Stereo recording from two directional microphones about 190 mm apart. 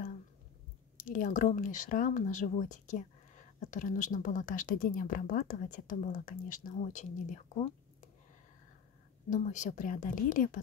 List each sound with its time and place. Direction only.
0.9 s speech: 45° left (ahead or behind)
9.3 s speech: 40° left (ahead or behind)